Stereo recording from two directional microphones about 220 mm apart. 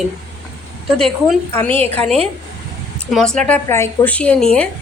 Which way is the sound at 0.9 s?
Centre (ahead or behind).